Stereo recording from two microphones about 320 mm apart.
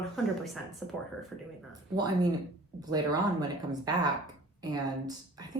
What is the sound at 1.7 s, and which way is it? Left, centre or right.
Speech, centre.